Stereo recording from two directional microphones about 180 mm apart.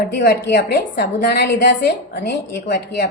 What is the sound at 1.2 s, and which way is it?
A woman's voice, 70° left (ahead or behind).